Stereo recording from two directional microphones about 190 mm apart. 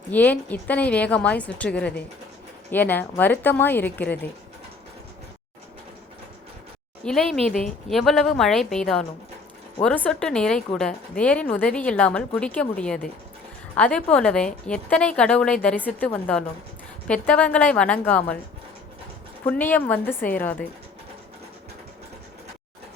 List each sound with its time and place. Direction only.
0.1 s a woman's voice: 10° left (ahead or behind)
7.0 s a woman's voice: centre (ahead or behind)
19.5 s a woman's voice: 10° left (ahead or behind)